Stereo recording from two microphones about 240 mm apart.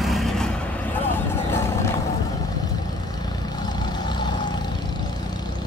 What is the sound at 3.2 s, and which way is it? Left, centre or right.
Vehicle, centre.